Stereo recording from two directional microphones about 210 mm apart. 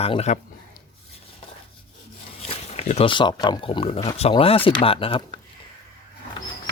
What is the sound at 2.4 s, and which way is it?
Speech, 30° left (ahead or behind).